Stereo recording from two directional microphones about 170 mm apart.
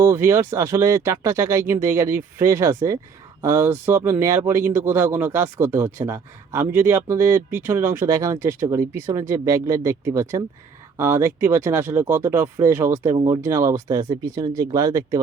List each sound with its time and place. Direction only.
0.0 s speech: 15° right (ahead or behind)